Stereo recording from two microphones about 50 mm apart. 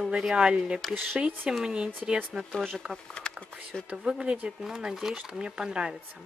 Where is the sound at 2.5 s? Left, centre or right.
Centre.